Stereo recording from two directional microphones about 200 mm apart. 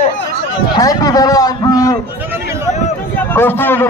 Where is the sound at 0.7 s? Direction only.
20° left (ahead or behind).